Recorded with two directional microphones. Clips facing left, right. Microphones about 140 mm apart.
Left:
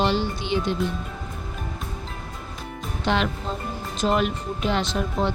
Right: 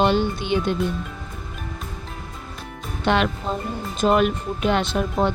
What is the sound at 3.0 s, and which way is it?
Speech, 60° right (ahead or behind).